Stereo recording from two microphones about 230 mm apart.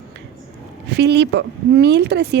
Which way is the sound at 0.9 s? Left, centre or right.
Right.